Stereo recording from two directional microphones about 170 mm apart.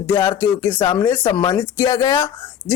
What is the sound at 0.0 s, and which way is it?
Speech, 15° left (ahead or behind).